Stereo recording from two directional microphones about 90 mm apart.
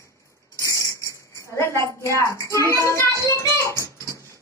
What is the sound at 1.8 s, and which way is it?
A woman's voice, 35° left (ahead or behind).